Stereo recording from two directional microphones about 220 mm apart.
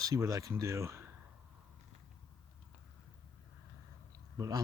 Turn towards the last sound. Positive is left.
turn(degrees=-15)  # may be behind; listen again after turning